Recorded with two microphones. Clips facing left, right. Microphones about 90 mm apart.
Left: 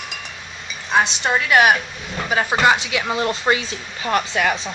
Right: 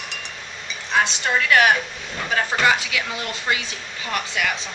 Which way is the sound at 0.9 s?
20° left (ahead or behind).